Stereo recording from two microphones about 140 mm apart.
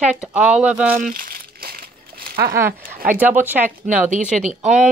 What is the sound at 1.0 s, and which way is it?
Speech, 85° right.